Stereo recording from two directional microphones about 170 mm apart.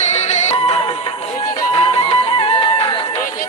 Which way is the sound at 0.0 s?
45° left (ahead or behind).